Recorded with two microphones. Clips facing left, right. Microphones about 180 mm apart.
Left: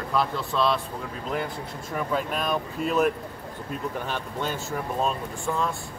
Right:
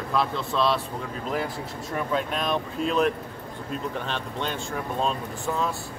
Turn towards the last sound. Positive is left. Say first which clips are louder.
# even
turn(degrees=0)  # may be behind; listen again after turning